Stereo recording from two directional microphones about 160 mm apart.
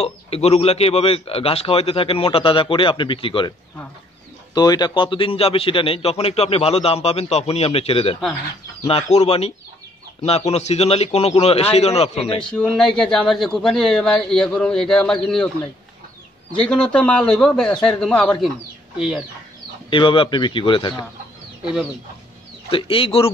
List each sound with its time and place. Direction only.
0.0 s a man's voice: 40° left (ahead or behind)
4.6 s a man's voice: 25° left (ahead or behind)
12.4 s speech: 5° left (ahead or behind)
19.9 s a man's voice: 30° left (ahead or behind)
22.7 s a man's voice: 35° left (ahead or behind)